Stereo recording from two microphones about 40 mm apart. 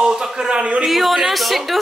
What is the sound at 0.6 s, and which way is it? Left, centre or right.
Speech, right.